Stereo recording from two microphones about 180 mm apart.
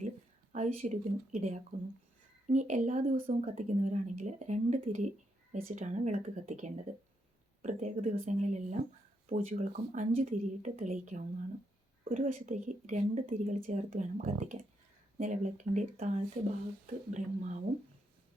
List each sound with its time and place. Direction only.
0.5 s speech: 40° right (ahead or behind)